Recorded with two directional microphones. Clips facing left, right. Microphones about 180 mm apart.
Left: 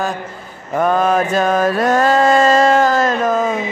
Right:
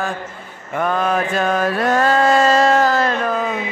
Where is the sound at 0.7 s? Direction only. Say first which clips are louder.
Left 4 dB; 40° left (ahead or behind).